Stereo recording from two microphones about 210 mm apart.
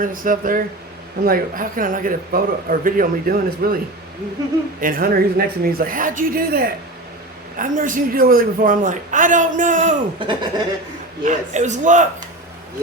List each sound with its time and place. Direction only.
0.0 s speech: 40° right (ahead or behind)
4.8 s a woman's voice: 45° right (ahead or behind)
10.2 s speech: 25° right (ahead or behind)
11.2 s speech: 35° right (ahead or behind)